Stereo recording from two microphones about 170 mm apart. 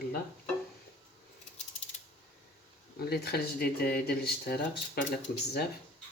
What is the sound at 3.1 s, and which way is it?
Speech, 65° left (ahead or behind).